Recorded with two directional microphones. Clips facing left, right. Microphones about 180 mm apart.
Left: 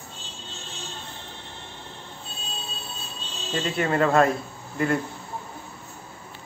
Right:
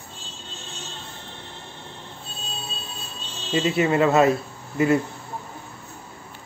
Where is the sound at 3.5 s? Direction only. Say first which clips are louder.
Right 4 dB; 5° right (ahead or behind).